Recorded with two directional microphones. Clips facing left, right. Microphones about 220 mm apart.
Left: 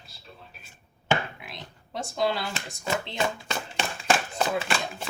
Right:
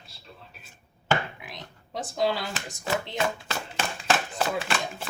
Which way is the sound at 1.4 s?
15° right (ahead or behind).